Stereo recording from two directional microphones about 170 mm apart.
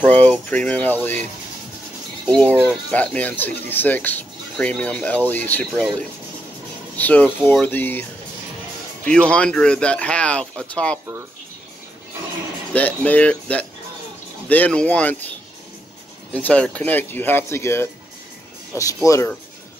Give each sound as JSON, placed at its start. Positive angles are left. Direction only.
{"t": 0.0, "sound": "speech", "side_deg": 10}
{"t": 2.2, "sound": "speech", "side_deg": 10}
{"t": 7.0, "sound": "speech", "side_deg": 10}
{"t": 12.7, "sound": "speech", "side_deg": 10}
{"t": 16.3, "sound": "speech", "side_deg": 10}